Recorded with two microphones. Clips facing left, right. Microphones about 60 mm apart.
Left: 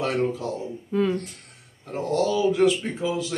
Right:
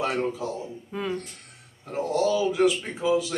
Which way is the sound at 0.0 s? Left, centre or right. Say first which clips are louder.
Left 2 dB; centre.